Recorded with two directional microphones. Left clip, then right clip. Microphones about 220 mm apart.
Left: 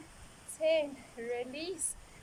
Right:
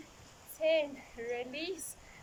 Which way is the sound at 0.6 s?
Centre (ahead or behind).